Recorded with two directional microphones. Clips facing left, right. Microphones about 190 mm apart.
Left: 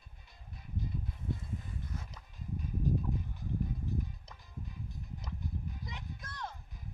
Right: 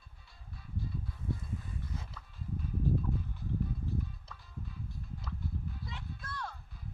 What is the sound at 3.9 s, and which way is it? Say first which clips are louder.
Music: even; 15° left (ahead or behind).